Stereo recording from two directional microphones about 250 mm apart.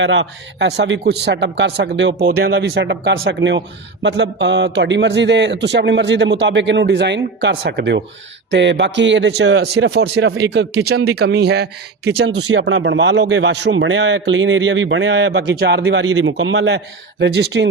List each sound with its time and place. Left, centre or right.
0.0 s a man's voice: right